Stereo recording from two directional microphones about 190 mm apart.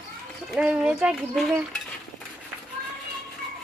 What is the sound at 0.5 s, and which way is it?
A woman's voice, 5° right (ahead or behind).